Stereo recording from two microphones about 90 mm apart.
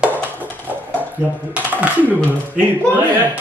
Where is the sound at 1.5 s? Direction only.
15° right (ahead or behind).